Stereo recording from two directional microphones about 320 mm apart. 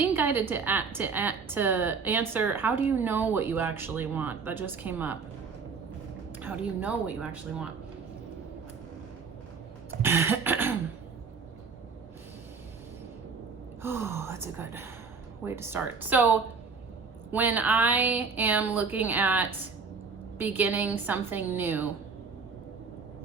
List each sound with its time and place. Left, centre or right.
0.0 s a woman's voice: centre
6.4 s a woman's voice: centre
10.0 s cough: centre
13.8 s speech: centre
17.3 s a woman's voice: centre